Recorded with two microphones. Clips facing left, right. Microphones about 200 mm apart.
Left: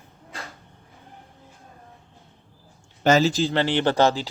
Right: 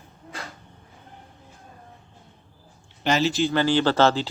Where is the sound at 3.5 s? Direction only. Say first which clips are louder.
Right 1 dB; 25° left (ahead or behind).